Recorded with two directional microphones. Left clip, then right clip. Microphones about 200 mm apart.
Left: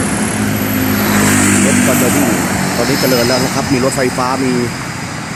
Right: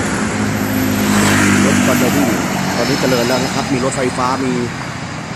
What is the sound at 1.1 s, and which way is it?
Vehicle, 45° left (ahead or behind).